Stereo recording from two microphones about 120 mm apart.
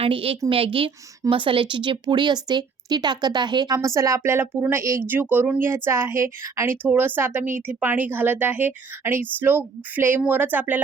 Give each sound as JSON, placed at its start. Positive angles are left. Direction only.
{"t": 0.0, "sound": "a woman's voice", "side_deg": -50}